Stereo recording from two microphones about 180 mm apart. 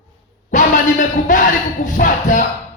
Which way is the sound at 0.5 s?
45° left (ahead or behind).